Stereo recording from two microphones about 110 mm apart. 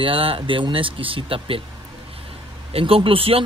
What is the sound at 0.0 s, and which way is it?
Speech, 55° right (ahead or behind).